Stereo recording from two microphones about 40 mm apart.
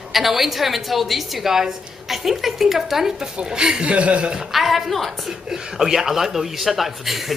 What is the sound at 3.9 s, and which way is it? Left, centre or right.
Speech, right.